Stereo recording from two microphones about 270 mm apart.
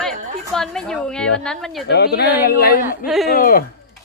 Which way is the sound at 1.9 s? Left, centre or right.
Left.